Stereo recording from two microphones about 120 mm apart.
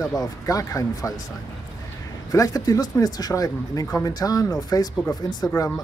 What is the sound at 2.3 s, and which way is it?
Speech, 30° left (ahead or behind).